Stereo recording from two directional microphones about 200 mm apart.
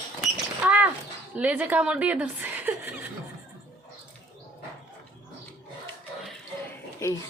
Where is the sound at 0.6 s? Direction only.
5° right (ahead or behind).